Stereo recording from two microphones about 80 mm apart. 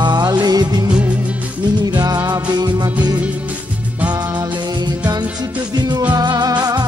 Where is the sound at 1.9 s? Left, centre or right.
Right.